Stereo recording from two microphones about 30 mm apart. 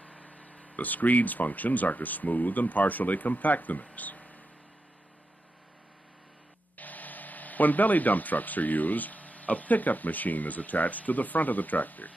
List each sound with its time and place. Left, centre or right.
0.0 s speech: left
6.8 s speech: left